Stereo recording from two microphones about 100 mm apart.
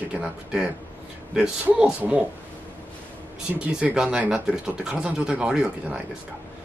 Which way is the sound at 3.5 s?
15° right (ahead or behind).